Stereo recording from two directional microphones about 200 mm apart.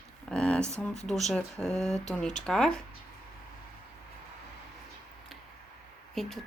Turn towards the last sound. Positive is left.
turn(degrees=0)  # may be behind; listen again after turning